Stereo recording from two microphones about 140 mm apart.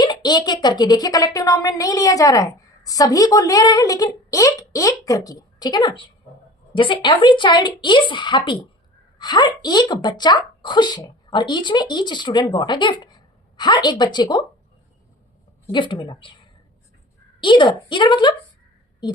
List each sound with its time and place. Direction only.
0.0 s a woman's voice: 30° left (ahead or behind)
15.7 s a woman's voice: 35° left (ahead or behind)
17.4 s a woman's voice: 35° left (ahead or behind)